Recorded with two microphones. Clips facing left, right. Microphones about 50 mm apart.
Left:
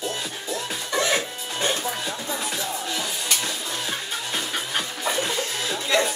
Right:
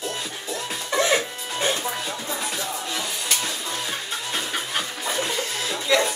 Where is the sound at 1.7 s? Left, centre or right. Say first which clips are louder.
Even; centre.